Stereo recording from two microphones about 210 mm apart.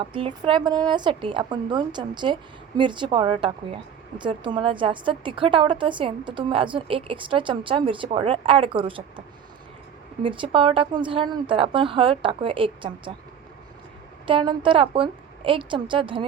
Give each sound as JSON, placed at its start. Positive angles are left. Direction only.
{"t": 0.0, "sound": "a woman's voice", "side_deg": -25}
{"t": 10.2, "sound": "a woman's voice", "side_deg": -25}
{"t": 14.3, "sound": "a woman's voice", "side_deg": -25}